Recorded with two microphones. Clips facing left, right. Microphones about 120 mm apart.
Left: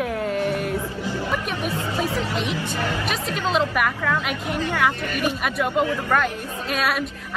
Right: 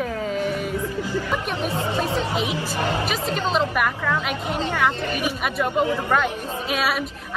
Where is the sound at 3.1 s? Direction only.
Centre (ahead or behind).